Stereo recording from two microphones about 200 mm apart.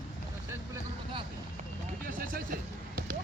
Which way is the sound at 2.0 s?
45° right (ahead or behind).